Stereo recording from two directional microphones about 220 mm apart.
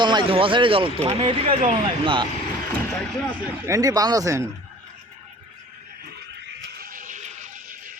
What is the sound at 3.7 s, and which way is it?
Speech, 15° right (ahead or behind).